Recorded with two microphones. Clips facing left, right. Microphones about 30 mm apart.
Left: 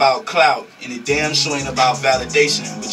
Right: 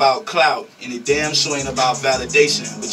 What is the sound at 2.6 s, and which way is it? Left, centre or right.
Speech, centre.